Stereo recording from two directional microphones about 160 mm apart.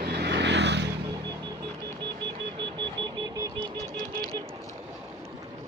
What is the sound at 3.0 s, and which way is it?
Vehicle, 25° right (ahead or behind).